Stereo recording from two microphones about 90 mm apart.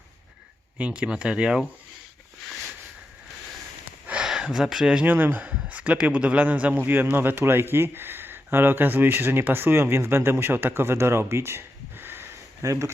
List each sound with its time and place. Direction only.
0.8 s speech: 10° right (ahead or behind)
4.0 s a sound: 10° right (ahead or behind)
5.0 s speech: 20° right (ahead or behind)
12.6 s speech: 35° right (ahead or behind)